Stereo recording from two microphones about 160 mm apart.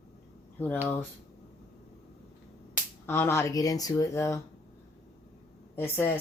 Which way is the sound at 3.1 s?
15° left (ahead or behind).